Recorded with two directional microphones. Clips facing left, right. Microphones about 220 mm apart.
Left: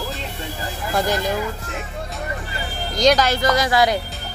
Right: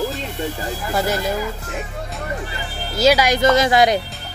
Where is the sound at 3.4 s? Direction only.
25° right (ahead or behind).